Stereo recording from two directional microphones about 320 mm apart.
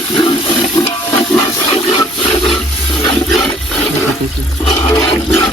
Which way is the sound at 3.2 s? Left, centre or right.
Centre.